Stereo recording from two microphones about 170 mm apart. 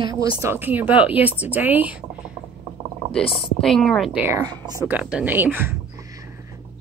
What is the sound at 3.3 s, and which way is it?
Speech, centre (ahead or behind).